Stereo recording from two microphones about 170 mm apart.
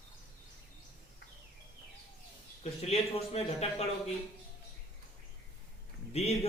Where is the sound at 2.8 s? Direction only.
35° left (ahead or behind).